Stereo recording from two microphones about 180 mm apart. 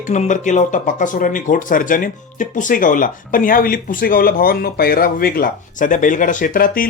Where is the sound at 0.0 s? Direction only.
45° left (ahead or behind).